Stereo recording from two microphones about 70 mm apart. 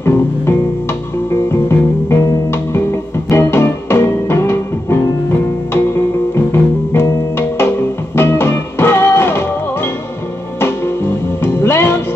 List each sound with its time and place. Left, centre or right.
0.0 s music: left
11.4 s music: left